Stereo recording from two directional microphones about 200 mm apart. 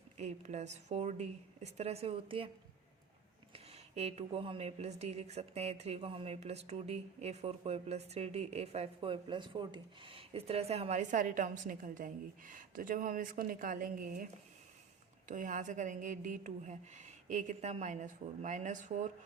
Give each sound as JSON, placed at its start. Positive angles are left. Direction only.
{"t": 0.2, "sound": "speech", "side_deg": -35}
{"t": 3.5, "sound": "speech", "side_deg": -30}
{"t": 15.3, "sound": "speech", "side_deg": -40}